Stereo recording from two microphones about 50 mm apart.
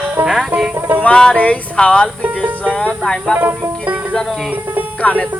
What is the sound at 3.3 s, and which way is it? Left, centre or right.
Music, right.